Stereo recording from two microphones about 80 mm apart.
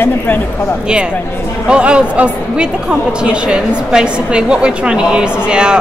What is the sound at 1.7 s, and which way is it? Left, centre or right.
Speech, centre.